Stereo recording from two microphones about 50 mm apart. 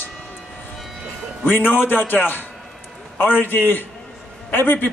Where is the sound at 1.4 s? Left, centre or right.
Left.